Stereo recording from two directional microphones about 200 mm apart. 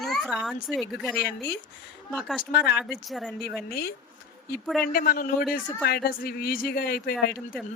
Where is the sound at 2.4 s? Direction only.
50° left (ahead or behind).